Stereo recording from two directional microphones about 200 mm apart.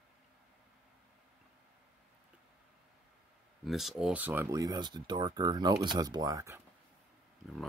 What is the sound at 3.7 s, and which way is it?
Speech, centre (ahead or behind).